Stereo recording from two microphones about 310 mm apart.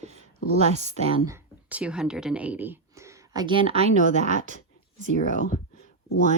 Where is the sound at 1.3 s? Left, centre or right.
Centre; by 4.5 s right.